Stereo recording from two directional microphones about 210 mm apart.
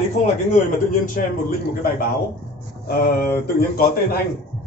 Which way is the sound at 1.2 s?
40° left (ahead or behind).